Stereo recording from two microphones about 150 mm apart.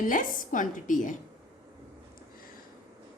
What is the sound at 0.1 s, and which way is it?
A woman's voice, 65° left (ahead or behind).